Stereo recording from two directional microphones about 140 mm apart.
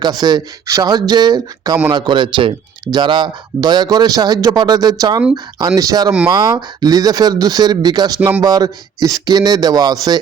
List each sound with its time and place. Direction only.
0.0 s a man's voice: 30° right (ahead or behind)